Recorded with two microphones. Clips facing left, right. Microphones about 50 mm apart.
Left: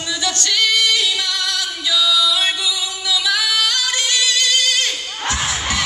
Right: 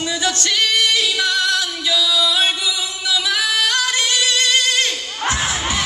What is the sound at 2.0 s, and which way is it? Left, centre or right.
Female singing, right.